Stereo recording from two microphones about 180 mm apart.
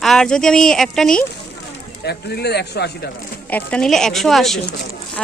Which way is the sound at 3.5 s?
10° left (ahead or behind).